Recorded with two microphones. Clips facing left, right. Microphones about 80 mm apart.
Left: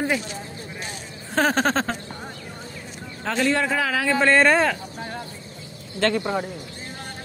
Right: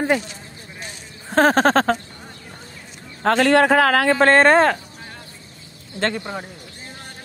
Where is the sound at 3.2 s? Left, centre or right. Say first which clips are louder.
Right 7 dB; right.